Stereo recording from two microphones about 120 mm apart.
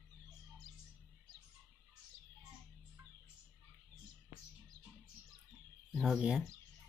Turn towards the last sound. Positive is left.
turn(degrees=-5)  # may be behind; listen again after turning